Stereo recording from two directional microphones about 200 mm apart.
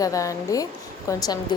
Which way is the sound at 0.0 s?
15° left (ahead or behind).